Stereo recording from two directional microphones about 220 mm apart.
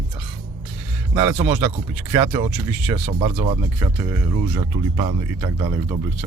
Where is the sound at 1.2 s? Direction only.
10° right (ahead or behind).